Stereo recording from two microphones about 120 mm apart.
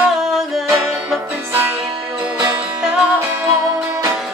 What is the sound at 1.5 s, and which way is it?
Music, 15° right (ahead or behind).